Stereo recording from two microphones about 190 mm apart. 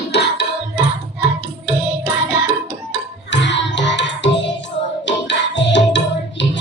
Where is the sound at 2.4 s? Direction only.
65° left (ahead or behind).